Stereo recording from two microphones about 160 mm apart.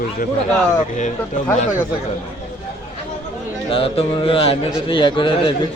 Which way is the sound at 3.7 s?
35° left (ahead or behind).